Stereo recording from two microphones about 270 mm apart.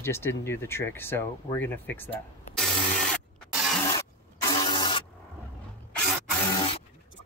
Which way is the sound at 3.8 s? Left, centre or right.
Centre.